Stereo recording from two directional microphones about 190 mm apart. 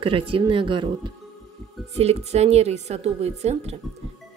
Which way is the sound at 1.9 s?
35° right (ahead or behind).